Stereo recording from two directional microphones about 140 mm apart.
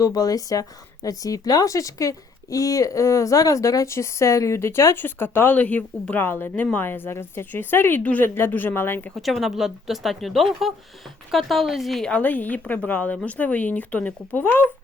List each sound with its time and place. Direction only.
0.0 s speech: 25° left (ahead or behind)
9.1 s a woman's voice: centre (ahead or behind)